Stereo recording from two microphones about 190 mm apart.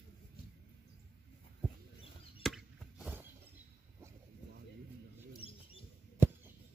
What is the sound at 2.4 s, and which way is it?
Chop, 5° right (ahead or behind).